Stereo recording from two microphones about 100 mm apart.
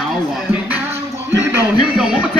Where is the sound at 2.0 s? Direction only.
10° right (ahead or behind).